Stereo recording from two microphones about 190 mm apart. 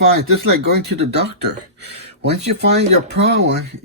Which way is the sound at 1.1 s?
60° right (ahead or behind).